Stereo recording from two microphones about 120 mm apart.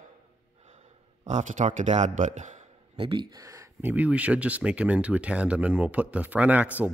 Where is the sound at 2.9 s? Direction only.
45° right (ahead or behind); by 3.9 s 25° right (ahead or behind).